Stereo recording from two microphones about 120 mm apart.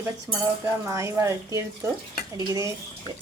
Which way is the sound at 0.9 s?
25° right (ahead or behind).